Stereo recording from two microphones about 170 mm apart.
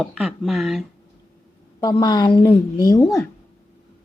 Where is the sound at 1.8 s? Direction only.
25° left (ahead or behind).